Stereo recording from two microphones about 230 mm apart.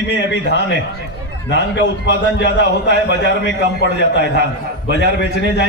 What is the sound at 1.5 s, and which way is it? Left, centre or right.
A man's voice, left.